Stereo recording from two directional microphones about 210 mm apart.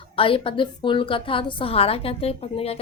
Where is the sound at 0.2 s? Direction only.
25° left (ahead or behind).